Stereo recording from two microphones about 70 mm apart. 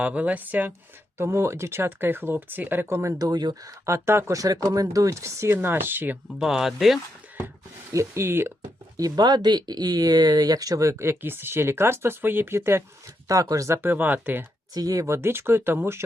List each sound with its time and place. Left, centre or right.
0.0 s speech: right
1.2 s speech: right
3.2 s speech: right
3.5 s speech: right
3.9 s speech: right
4.4 s speech: right
5.5 s speech: right
6.4 s speech: centre
7.9 s speech: right
9.0 s speech: right
13.2 s speech: right
13.8 s speech: right
14.7 s speech: right